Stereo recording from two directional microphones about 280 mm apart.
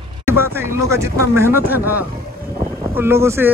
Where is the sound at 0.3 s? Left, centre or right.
Centre.